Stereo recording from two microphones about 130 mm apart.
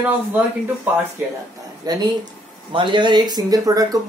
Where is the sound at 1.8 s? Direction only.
30° right (ahead or behind).